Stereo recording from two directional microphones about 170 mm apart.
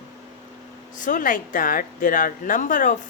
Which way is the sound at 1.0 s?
50° left (ahead or behind).